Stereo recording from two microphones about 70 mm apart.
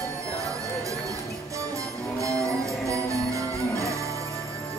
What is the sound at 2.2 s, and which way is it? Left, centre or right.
Music, right.